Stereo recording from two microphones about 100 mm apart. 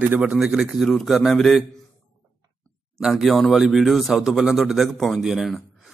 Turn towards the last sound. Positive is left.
turn(degrees=0)  # may be behind; listen again after turning